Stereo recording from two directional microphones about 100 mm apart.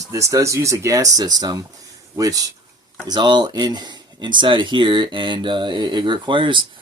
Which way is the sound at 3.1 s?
50° right (ahead or behind).